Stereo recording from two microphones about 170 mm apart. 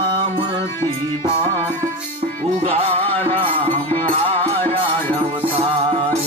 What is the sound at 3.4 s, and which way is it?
Music, 30° right (ahead or behind).